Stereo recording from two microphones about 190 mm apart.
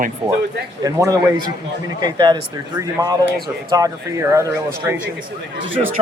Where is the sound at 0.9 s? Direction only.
20° right (ahead or behind).